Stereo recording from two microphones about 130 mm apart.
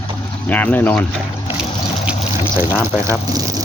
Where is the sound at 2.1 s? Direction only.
10° right (ahead or behind).